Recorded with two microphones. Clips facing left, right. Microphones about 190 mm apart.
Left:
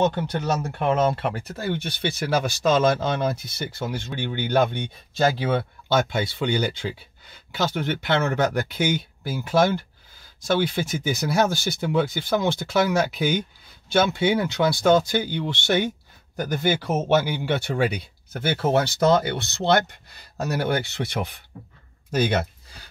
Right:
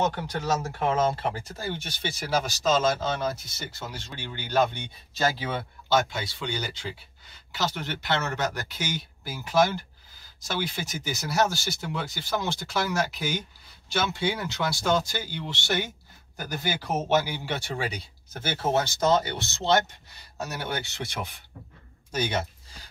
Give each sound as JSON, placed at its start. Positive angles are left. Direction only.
{"t": 0.7, "sound": "speech", "side_deg": 65}